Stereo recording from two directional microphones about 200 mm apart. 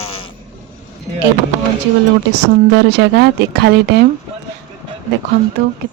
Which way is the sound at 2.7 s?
60° right (ahead or behind).